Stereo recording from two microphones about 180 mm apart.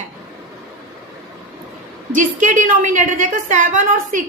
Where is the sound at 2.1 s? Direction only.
45° right (ahead or behind).